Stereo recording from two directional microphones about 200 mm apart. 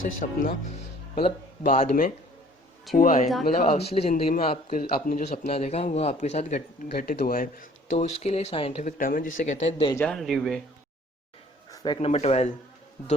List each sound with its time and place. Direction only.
0.0 s a man's voice: 45° left (ahead or behind)
3.6 s a man's voice: 30° left (ahead or behind)
9.0 s a man's voice: 45° left (ahead or behind)
9.9 s a man's voice: 5° left (ahead or behind)
11.7 s a sound: 20° left (ahead or behind)
11.9 s a man's voice: 35° left (ahead or behind)